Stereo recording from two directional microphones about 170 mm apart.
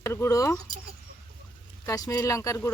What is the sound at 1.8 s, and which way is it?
Speech, 20° left (ahead or behind).